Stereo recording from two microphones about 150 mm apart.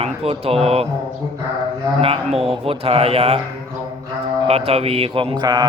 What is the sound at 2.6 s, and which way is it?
Speech, 40° right (ahead or behind).